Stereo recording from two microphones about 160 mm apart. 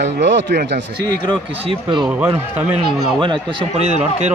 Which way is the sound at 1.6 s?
30° right (ahead or behind).